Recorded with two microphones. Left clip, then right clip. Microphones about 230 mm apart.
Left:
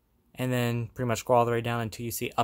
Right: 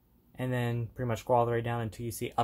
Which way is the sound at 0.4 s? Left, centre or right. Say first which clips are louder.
Left 4 dB; left.